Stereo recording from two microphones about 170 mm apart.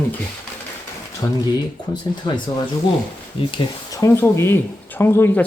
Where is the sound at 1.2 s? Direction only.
20° left (ahead or behind).